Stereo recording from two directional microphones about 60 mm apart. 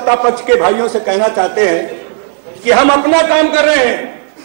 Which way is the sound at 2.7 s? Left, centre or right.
Centre.